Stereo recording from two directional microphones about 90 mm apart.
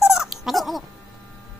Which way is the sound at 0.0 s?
5° right (ahead or behind).